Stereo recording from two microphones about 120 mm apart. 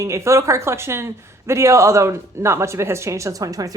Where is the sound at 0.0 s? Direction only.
25° right (ahead or behind).